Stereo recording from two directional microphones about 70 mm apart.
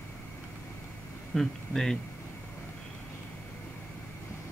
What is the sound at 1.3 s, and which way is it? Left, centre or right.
Speech, centre.